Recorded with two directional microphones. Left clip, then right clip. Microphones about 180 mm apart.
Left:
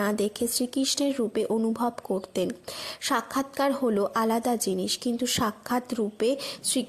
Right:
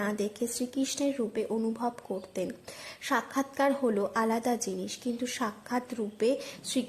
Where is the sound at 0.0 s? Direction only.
25° left (ahead or behind).